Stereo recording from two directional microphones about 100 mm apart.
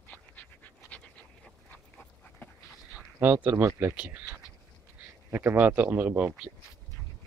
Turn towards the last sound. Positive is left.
turn(degrees=-15)  # may be behind; listen again after turning